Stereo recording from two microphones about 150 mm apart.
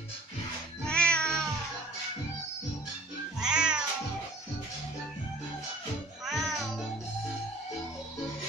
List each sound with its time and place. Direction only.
0.8 s music: 5° left (ahead or behind)
3.3 s cat: 5° right (ahead or behind)
6.2 s music: centre (ahead or behind)